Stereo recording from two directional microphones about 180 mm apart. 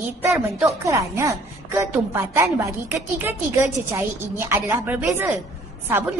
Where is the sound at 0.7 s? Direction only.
15° right (ahead or behind).